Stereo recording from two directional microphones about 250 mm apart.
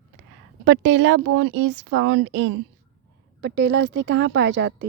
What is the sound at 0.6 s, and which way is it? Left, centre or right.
Speech, right.